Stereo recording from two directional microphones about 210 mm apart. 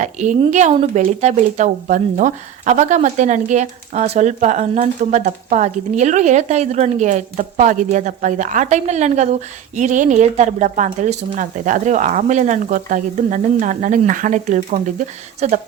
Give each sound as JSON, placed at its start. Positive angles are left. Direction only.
{"t": 0.0, "sound": "speech", "side_deg": -35}